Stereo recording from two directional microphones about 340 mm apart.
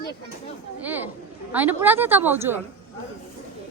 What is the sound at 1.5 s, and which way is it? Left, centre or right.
A woman's voice, centre.